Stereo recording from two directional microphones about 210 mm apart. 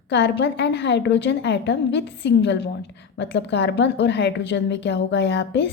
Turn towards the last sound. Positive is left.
turn(degrees=60)  # may be behind; listen again after turning